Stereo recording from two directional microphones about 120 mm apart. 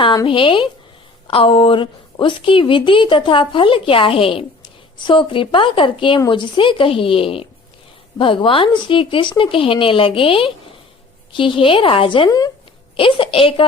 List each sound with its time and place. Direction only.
0.3 s a woman's voice: 45° left (ahead or behind)